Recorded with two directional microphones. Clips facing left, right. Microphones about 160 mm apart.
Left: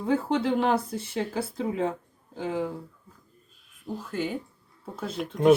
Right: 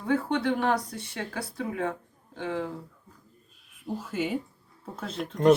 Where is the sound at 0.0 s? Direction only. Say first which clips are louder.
Left 1 dB; 25° left (ahead or behind).